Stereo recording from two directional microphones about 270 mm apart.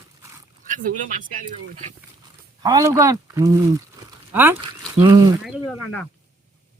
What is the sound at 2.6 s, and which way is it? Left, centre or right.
Speech, centre.